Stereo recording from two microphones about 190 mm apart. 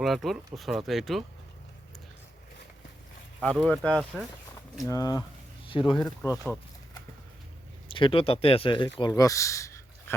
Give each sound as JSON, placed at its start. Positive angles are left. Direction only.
{"t": 0.0, "sound": "speech", "side_deg": 0}
{"t": 3.4, "sound": "speech", "side_deg": 5}
{"t": 4.9, "sound": "speech", "side_deg": 20}
{"t": 7.9, "sound": "speech", "side_deg": 25}